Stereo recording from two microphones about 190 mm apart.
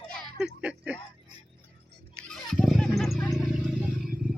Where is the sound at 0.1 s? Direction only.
5° right (ahead or behind).